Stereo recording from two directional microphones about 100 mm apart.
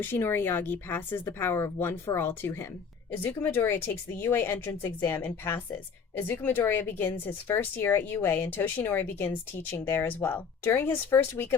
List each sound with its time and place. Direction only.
0.0 s speech: 25° left (ahead or behind)